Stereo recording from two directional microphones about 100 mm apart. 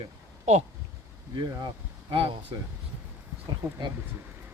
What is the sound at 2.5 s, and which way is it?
Speech, 50° right (ahead or behind).